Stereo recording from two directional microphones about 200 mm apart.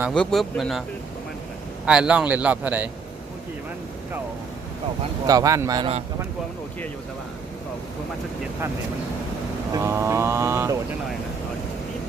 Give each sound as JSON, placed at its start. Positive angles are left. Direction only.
{"t": 0.1, "sound": "speech", "side_deg": 5}
{"t": 1.9, "sound": "speech", "side_deg": -5}
{"t": 5.2, "sound": "speech", "side_deg": -15}
{"t": 9.7, "sound": "speech", "side_deg": -15}